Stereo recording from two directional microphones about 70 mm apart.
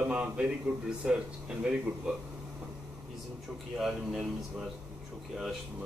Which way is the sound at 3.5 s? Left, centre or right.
Centre.